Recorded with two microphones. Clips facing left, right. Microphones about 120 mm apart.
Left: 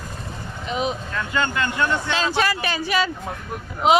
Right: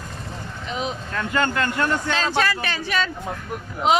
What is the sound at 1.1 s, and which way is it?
Speech, 45° right (ahead or behind).